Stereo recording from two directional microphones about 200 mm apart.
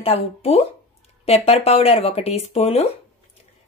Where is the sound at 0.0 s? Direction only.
30° left (ahead or behind).